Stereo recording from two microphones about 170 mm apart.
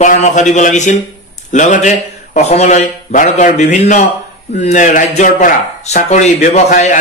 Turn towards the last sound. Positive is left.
turn(degrees=45)  # may be behind; listen again after turning